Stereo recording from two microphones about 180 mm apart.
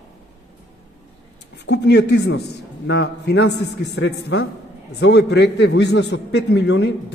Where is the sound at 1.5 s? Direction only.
70° left (ahead or behind).